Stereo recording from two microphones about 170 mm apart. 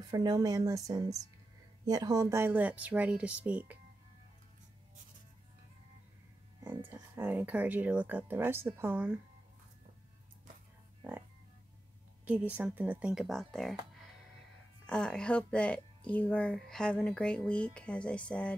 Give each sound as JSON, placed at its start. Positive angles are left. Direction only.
{"t": 0.1, "sound": "speech", "side_deg": -20}
{"t": 6.6, "sound": "speech", "side_deg": -15}
{"t": 12.3, "sound": "speech", "side_deg": -10}
{"t": 14.9, "sound": "speech", "side_deg": 5}